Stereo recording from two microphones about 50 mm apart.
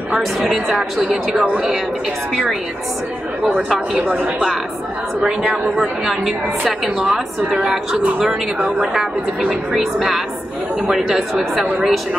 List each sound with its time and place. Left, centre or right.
0.2 s a woman's voice: centre
1.1 s speech: centre
5.8 s a woman's voice: centre
9.4 s a woman's voice: centre